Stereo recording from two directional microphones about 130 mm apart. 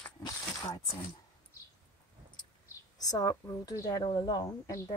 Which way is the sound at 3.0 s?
30° left (ahead or behind).